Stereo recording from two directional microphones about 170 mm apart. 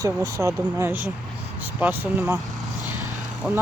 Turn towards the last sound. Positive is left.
turn(degrees=-5)  # may be behind; listen again after turning